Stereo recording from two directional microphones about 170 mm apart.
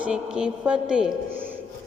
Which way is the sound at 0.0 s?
5° right (ahead or behind).